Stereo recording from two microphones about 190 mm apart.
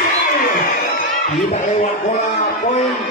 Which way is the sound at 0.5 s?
50° left (ahead or behind).